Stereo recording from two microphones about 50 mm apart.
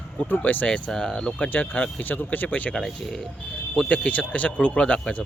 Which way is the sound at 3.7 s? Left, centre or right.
Left.